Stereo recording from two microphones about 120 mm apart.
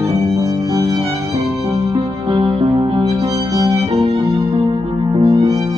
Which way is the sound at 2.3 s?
45° right (ahead or behind).